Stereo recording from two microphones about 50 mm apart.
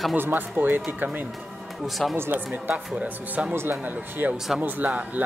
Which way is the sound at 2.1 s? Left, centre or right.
Right.